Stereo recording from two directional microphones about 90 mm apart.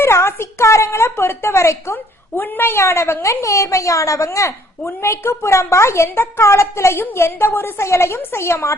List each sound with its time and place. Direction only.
0.0 s a woman's voice: 30° left (ahead or behind)